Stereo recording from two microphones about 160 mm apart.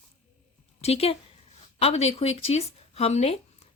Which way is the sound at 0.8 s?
40° left (ahead or behind).